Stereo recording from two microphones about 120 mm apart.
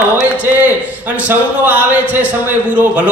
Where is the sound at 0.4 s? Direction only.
15° right (ahead or behind).